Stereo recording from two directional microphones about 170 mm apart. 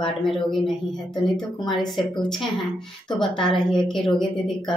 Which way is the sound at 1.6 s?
25° left (ahead or behind).